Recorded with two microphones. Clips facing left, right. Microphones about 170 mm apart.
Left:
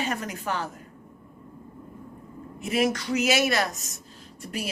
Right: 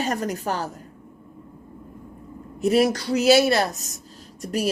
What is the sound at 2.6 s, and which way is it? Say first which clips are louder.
A woman's voice: right 6 dB; 35° right (ahead or behind).